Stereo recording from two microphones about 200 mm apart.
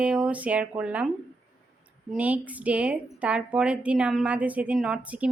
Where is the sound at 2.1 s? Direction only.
5° right (ahead or behind).